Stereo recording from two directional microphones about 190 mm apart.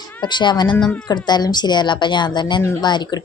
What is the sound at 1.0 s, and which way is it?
A woman's voice, 20° left (ahead or behind).